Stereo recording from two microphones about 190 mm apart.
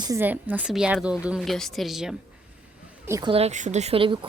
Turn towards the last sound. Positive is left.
turn(degrees=-30)  # may be behind; listen again after turning